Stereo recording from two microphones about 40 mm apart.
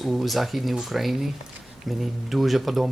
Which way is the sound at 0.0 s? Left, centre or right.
Centre.